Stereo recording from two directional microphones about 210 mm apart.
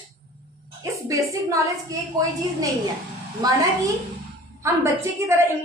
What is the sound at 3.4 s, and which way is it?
Speech, 15° right (ahead or behind).